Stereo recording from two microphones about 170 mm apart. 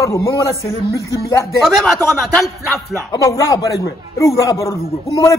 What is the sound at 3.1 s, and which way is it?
A man's voice, 20° left (ahead or behind).